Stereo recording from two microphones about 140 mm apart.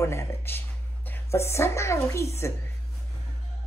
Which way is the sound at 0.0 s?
20° left (ahead or behind).